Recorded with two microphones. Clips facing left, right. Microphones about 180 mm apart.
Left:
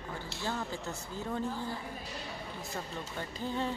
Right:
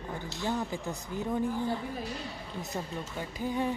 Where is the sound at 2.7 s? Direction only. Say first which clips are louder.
Right 3 dB; 10° right (ahead or behind).